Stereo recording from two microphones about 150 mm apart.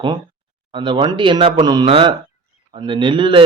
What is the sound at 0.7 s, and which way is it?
A man's voice, 35° right (ahead or behind).